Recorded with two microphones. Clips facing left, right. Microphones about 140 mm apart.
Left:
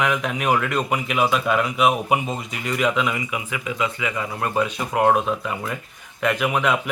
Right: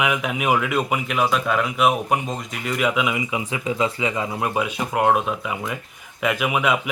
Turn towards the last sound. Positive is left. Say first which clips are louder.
# even
turn(degrees=-5)  # may be behind; listen again after turning